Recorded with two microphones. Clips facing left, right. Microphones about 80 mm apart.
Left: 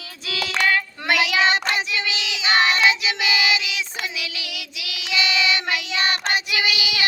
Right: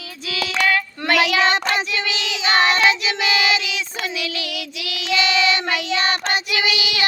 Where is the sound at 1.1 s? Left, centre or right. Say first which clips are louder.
Right 3 dB; centre.